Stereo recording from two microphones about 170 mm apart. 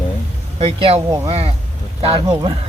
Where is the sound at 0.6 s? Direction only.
35° right (ahead or behind).